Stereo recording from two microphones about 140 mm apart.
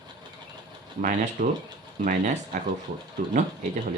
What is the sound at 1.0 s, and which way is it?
Speech, 70° right (ahead or behind).